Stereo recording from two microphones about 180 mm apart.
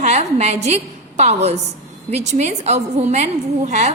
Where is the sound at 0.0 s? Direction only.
40° right (ahead or behind).